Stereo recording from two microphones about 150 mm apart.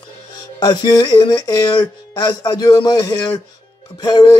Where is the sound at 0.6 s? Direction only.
25° left (ahead or behind).